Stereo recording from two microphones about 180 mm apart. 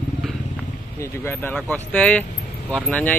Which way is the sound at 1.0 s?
15° left (ahead or behind).